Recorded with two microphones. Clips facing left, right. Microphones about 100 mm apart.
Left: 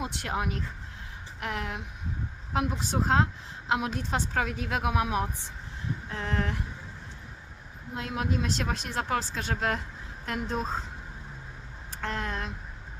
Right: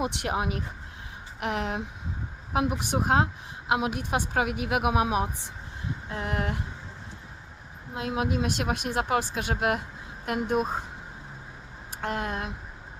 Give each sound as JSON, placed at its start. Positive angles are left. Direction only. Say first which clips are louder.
{"t": 0.0, "sound": "speech", "louder": "right 3 dB", "side_deg": -20}
{"t": 7.9, "sound": "speech", "louder": "right 3 dB", "side_deg": -20}
{"t": 12.0, "sound": "speech", "louder": "right 3 dB", "side_deg": -15}